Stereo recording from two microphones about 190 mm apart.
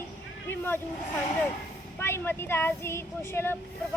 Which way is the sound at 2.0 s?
10° left (ahead or behind).